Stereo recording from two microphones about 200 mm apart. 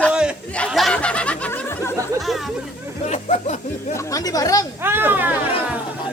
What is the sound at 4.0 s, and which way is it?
Speech, 15° left (ahead or behind).